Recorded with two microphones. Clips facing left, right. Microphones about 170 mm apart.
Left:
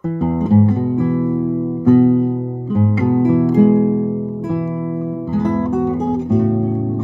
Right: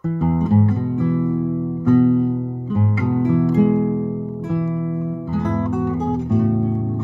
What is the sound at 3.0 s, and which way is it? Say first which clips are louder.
Music: left 4 dB; 30° left (ahead or behind).